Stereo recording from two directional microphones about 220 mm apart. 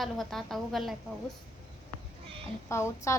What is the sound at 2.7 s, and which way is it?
Speech, 15° left (ahead or behind).